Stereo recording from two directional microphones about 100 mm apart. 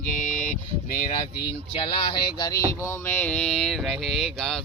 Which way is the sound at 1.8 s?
55° left (ahead or behind).